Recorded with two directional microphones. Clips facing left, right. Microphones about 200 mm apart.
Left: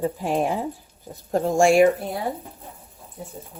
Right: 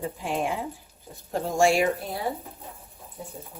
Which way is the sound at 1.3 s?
50° left (ahead or behind).